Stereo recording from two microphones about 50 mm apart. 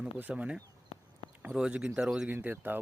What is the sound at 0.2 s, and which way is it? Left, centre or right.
Speech, right.